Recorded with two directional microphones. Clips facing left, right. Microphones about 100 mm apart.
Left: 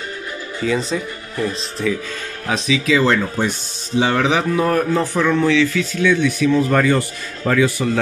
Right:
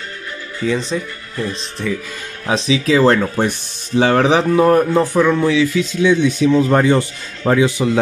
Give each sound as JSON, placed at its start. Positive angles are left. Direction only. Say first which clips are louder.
{"t": 0.7, "sound": "speech", "louder": "right 1 dB", "side_deg": 5}
{"t": 2.4, "sound": "speech", "louder": "right 3 dB", "side_deg": -30}
{"t": 3.3, "sound": "speech", "louder": "right 3 dB", "side_deg": -50}
{"t": 5.0, "sound": "speech", "louder": "right 2 dB", "side_deg": -15}